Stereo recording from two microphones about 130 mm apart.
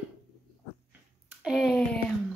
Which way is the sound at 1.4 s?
Centre (ahead or behind).